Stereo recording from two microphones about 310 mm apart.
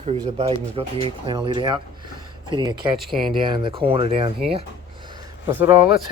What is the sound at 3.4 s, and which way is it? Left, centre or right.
Speech, centre.